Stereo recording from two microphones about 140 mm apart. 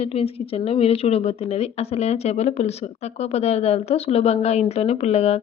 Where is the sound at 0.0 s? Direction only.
45° left (ahead or behind).